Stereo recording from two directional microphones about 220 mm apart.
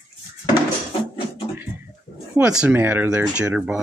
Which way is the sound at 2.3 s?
5° right (ahead or behind).